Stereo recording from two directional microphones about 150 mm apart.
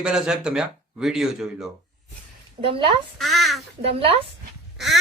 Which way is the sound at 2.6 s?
35° right (ahead or behind).